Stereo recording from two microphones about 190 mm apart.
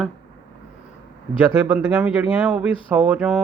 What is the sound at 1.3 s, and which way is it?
A man's voice, 10° right (ahead or behind).